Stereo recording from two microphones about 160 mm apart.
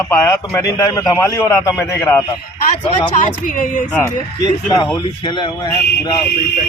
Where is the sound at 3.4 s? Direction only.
55° left (ahead or behind).